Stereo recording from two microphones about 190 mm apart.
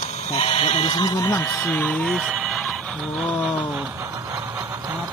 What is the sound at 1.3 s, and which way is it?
Speech, 10° left (ahead or behind).